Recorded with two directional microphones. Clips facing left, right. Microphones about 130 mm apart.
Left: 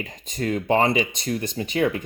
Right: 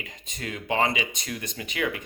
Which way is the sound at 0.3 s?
40° left (ahead or behind).